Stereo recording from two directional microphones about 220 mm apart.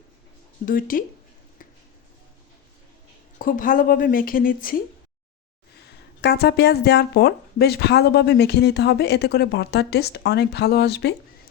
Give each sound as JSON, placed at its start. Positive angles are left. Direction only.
{"t": 0.6, "sound": "speech", "side_deg": 40}
{"t": 3.3, "sound": "speech", "side_deg": 35}
{"t": 6.2, "sound": "speech", "side_deg": 45}